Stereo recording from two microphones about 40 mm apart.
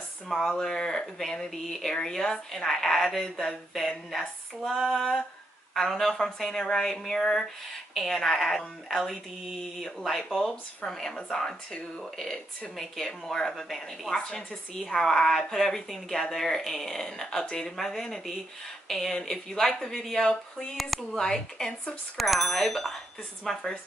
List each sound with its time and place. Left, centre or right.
0.3 s a woman's voice: centre
6.6 s a woman's voice: centre
12.0 s a woman's voice: centre
22.1 s speech: centre